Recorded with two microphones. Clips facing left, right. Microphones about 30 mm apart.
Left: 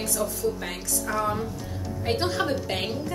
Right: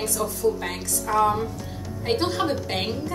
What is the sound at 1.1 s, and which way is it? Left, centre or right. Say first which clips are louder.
Speech: right 6 dB; centre.